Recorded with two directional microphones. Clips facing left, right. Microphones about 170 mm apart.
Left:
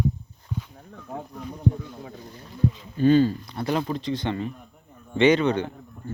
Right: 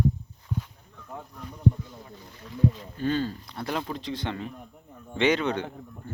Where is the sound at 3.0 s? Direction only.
15° left (ahead or behind).